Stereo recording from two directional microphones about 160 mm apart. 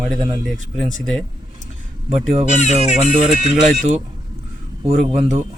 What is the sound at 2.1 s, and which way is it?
Speech, 45° right (ahead or behind).